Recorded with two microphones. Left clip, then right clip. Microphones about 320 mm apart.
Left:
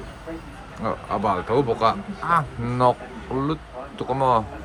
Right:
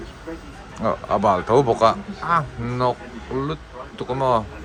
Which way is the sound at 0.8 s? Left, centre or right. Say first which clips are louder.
Right 5 dB; centre.